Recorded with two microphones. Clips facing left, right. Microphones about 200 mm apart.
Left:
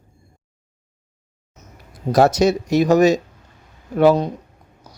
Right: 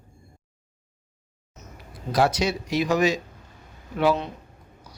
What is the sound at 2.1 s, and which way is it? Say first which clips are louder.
Speech: left 8 dB; 45° left (ahead or behind).